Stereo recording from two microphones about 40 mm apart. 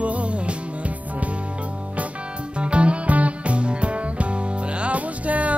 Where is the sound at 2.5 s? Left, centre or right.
Right.